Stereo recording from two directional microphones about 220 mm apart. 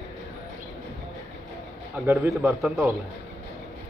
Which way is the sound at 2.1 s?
10° right (ahead or behind).